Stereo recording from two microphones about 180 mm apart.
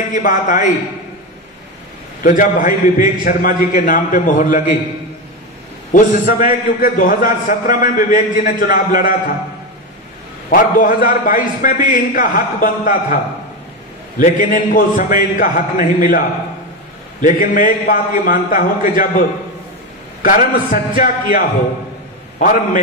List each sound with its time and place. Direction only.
0.1 s a man's voice: 45° left (ahead or behind)
2.2 s a man's voice: 50° left (ahead or behind)
5.9 s a man's voice: 50° left (ahead or behind)
10.5 s a man's voice: 50° left (ahead or behind)
17.2 s a man's voice: 45° left (ahead or behind)
20.2 s a man's voice: 50° left (ahead or behind)
22.4 s a man's voice: 50° left (ahead or behind)